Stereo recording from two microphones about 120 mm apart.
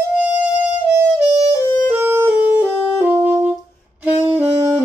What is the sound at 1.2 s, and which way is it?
Music, 55° right (ahead or behind).